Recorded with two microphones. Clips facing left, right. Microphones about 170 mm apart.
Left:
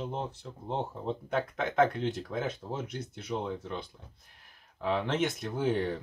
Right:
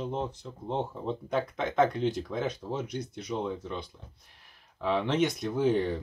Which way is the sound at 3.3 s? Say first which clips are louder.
Right 1 dB; 15° left (ahead or behind).